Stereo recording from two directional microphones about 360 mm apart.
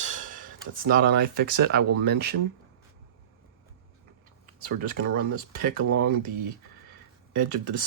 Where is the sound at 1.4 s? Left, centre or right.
Right.